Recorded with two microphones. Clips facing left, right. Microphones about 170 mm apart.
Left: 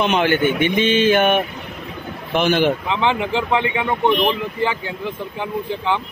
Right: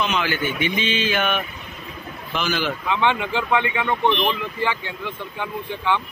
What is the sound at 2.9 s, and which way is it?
Speech, 25° left (ahead or behind).